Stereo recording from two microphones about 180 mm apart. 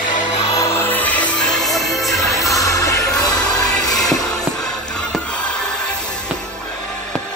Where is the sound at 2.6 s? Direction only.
20° left (ahead or behind).